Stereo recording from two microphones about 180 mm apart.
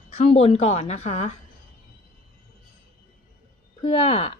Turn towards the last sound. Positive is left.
turn(degrees=35)  # may be behind; listen again after turning